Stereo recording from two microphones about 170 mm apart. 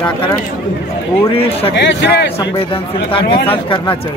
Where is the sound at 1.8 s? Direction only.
90° left.